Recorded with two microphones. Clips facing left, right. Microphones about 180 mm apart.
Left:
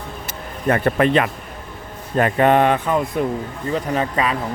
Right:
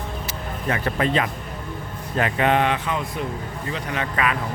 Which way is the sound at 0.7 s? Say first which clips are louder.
Left 6 dB; 55° left (ahead or behind).